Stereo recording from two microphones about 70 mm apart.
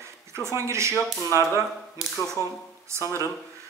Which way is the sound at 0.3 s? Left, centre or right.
Right.